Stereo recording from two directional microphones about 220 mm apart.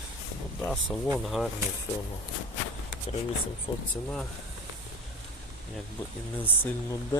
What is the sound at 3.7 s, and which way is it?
Speech, 20° left (ahead or behind).